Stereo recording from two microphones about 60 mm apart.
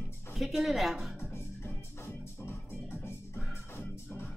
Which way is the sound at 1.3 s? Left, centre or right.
Left.